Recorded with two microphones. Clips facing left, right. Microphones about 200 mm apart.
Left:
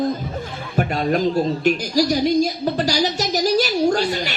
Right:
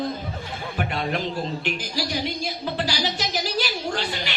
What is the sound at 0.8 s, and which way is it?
A man's voice, 40° left (ahead or behind).